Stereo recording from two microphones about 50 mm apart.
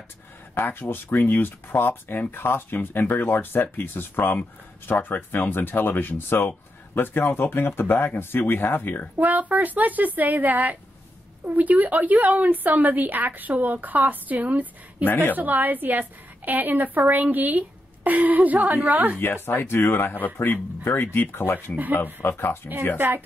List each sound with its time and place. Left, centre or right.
0.6 s speech: left
9.2 s a woman's voice: right
19.1 s speech: left
20.3 s speech: left
22.9 s a woman's voice: right